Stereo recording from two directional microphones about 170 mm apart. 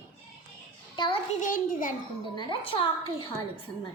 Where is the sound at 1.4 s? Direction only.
50° left (ahead or behind).